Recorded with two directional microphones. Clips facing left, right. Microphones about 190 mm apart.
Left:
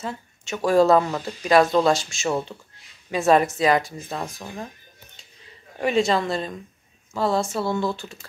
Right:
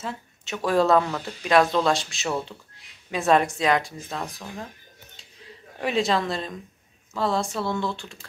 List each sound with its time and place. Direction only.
0.7 s speech: centre (ahead or behind)
5.8 s speech: centre (ahead or behind)